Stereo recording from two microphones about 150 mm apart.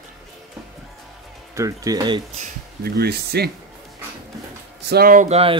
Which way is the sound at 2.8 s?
90° right.